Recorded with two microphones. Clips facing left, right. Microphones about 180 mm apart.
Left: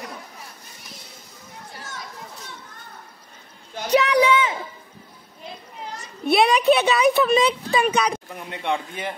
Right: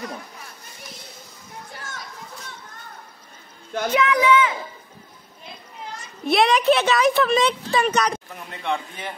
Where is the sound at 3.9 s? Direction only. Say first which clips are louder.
Left 3 dB; 40° left (ahead or behind).